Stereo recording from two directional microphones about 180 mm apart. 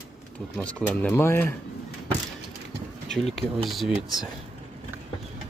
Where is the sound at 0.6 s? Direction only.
5° left (ahead or behind).